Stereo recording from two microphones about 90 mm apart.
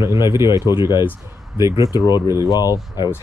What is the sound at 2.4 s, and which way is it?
Speech, 45° left (ahead or behind).